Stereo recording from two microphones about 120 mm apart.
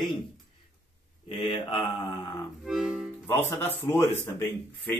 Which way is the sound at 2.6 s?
5° right (ahead or behind).